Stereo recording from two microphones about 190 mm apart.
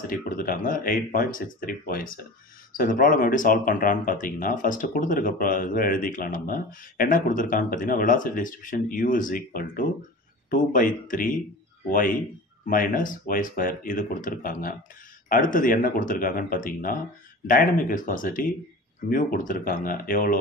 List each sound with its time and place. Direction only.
0.1 s speech: 45° left (ahead or behind)
12.6 s speech: 45° left (ahead or behind)